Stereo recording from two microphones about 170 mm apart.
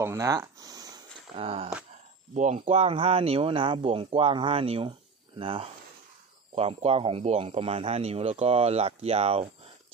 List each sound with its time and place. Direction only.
0.0 s speech: 15° right (ahead or behind)
1.3 s speech: 35° right (ahead or behind)
2.3 s speech: 45° right (ahead or behind)